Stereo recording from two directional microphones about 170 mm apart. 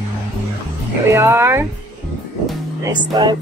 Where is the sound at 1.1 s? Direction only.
15° right (ahead or behind).